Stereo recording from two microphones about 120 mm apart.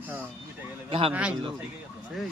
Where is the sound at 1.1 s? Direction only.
10° right (ahead or behind).